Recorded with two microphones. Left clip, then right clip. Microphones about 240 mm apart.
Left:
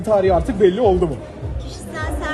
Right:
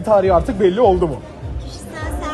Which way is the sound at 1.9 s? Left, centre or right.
Centre.